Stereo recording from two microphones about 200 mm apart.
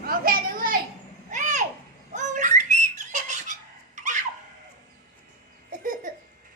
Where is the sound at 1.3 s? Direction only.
40° right (ahead or behind).